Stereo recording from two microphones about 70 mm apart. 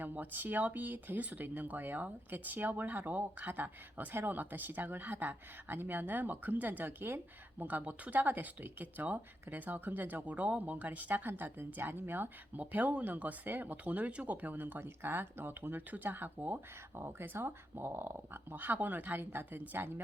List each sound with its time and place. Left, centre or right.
0.0 s speech: right